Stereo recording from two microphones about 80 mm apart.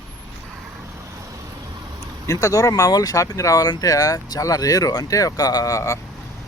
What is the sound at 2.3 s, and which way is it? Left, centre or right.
Speech, left.